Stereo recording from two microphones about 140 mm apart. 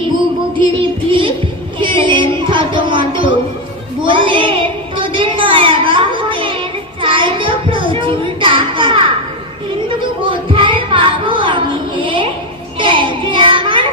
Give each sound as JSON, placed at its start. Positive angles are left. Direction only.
{"t": 0.5, "sound": "music", "side_deg": -35}
{"t": 1.8, "sound": "child singing", "side_deg": -35}
{"t": 4.0, "sound": "a sound", "side_deg": -35}
{"t": 7.0, "sound": "child singing", "side_deg": -35}
{"t": 10.2, "sound": "child singing", "side_deg": -35}
{"t": 12.8, "sound": "children playing", "side_deg": -35}